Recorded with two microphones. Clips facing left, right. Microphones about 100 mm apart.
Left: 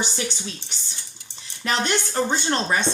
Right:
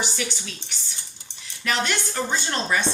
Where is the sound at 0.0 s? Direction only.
25° left (ahead or behind).